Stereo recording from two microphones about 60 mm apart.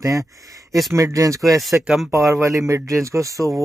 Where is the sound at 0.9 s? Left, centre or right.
Right.